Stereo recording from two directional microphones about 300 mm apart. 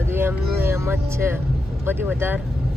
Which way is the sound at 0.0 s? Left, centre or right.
Centre.